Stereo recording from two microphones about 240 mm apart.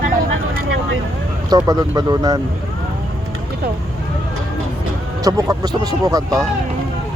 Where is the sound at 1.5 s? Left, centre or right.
Centre.